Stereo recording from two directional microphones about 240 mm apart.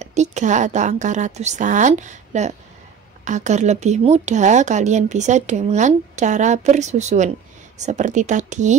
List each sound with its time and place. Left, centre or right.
0.0 s a woman's voice: right